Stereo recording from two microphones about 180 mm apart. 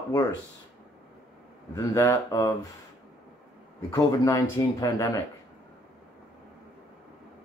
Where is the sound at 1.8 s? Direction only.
15° left (ahead or behind).